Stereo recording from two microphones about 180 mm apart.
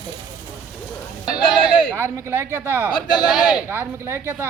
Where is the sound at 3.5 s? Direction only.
10° right (ahead or behind).